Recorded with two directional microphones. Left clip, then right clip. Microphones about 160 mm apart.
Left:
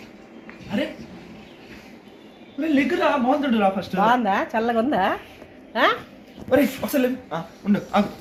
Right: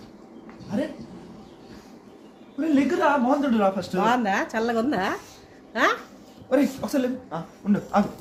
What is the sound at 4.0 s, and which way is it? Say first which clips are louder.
A woman's voice: left 4 dB; 15° right (ahead or behind).